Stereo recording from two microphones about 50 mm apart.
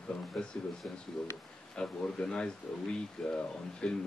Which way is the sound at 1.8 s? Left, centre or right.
Centre.